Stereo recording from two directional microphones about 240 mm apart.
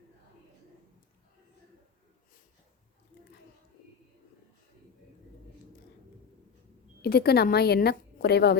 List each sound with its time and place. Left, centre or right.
7.0 s a woman's voice: left